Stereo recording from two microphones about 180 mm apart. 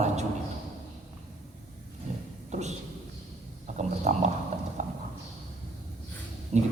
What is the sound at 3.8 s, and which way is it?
Speech, 40° right (ahead or behind).